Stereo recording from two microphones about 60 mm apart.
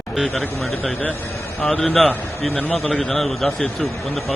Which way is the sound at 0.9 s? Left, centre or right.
Left.